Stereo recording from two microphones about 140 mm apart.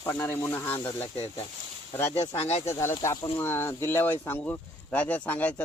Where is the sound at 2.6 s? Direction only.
20° left (ahead or behind).